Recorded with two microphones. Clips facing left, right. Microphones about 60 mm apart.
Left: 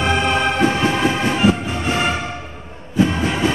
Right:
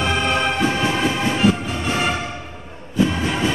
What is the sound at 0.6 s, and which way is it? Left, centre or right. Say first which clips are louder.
Music: left 3 dB; left.